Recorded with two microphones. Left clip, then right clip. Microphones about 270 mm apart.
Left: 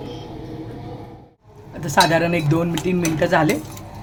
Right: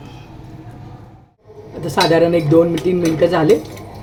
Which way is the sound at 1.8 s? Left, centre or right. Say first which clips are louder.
Right 3 dB; left.